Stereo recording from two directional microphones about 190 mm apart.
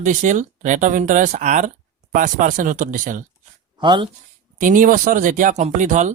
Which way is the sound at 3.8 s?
25° right (ahead or behind).